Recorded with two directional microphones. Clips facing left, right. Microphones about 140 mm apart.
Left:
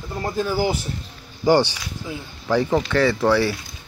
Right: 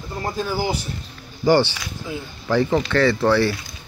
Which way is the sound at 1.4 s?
15° left (ahead or behind).